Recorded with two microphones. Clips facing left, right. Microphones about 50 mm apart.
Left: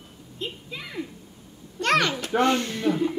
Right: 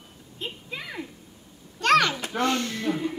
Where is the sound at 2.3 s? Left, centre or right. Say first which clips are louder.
Left 4 dB; left.